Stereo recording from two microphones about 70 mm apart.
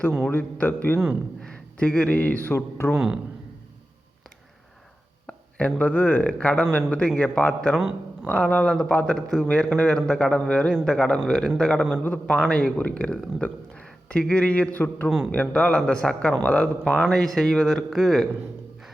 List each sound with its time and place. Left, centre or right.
0.3 s a man's voice: left
1.8 s a man's voice: centre; by 2.9 s left
2.9 s speech: centre
5.2 s a sound: centre
5.8 s a man's voice: left
7.8 s speech: centre
8.3 s a man's voice: left; by 9.5 s centre
9.5 s speech: centre
11.9 s a man's voice: left
12.4 s a man's voice: centre
16.3 s a man's voice: left
16.6 s a man's voice: centre